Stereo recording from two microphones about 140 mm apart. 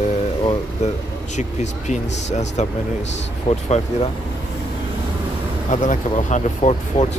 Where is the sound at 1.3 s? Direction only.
55° left (ahead or behind).